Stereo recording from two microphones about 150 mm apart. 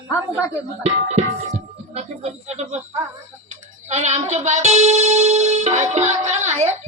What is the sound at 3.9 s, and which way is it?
Music, 50° right (ahead or behind).